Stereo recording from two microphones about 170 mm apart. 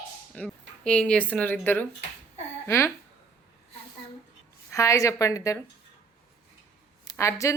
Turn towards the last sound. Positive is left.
turn(degrees=15)  # may be behind; listen again after turning